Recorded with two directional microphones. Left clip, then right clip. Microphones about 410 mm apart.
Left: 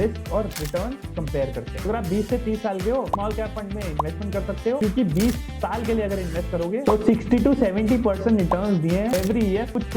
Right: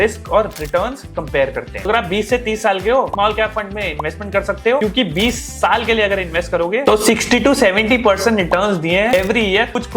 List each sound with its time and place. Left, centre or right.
0.0 s speech: centre